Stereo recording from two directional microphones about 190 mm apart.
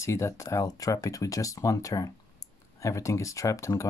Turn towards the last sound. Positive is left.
turn(degrees=15)  # may be behind; listen again after turning